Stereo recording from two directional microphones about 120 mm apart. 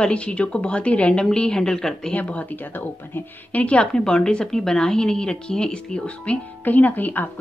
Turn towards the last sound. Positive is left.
turn(degrees=15)  # may be behind; listen again after turning